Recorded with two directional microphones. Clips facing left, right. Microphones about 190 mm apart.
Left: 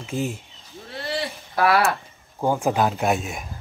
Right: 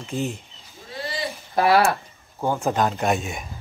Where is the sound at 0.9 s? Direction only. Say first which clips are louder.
Left 3 dB; 60° left (ahead or behind).